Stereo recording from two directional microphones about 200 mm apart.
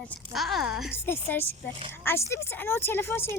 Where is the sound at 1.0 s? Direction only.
10° left (ahead or behind).